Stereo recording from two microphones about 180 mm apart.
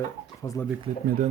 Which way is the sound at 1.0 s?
55° right (ahead or behind).